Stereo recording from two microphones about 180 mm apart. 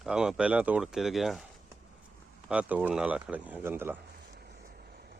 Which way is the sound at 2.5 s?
5° right (ahead or behind).